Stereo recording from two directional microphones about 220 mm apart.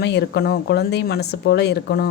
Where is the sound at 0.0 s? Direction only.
50° left (ahead or behind).